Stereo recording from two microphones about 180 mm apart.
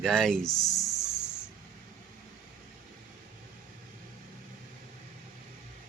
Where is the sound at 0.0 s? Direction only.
5° left (ahead or behind).